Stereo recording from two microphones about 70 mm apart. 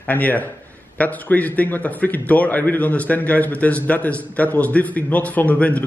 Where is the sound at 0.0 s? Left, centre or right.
Left.